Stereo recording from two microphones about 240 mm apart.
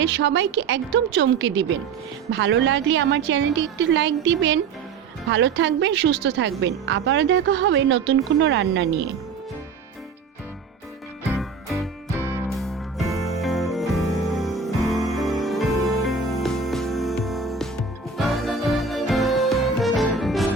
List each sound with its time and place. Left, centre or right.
0.0 s a woman's voice: right
11.3 s music: centre